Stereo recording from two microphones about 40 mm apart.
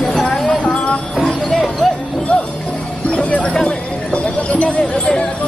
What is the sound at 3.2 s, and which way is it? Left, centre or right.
Horse, left.